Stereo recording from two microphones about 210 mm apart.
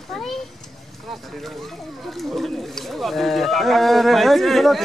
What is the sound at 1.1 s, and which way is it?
Speech, centre (ahead or behind).